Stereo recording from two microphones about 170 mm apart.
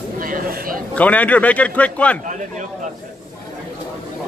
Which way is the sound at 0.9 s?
10° left (ahead or behind).